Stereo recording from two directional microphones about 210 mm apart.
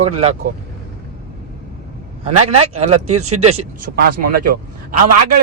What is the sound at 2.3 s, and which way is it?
Speech, 90° right.